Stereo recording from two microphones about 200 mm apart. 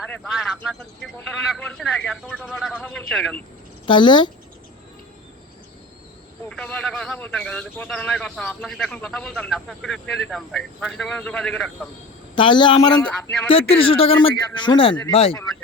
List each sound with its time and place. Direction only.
0.1 s a man's voice: 5° left (ahead or behind)
3.8 s speech: 25° left (ahead or behind)
6.5 s a man's voice: 5° left (ahead or behind)
12.4 s speech: 25° left (ahead or behind)
12.9 s speech: 5° left (ahead or behind)
13.5 s speech: 30° left (ahead or behind)